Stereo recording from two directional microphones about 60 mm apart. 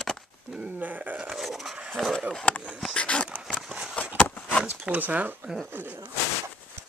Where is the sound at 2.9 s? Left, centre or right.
Centre.